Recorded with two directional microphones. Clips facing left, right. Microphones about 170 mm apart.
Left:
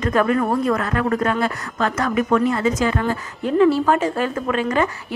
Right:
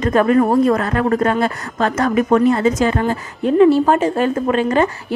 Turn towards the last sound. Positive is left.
turn(degrees=-30)  # may be behind; listen again after turning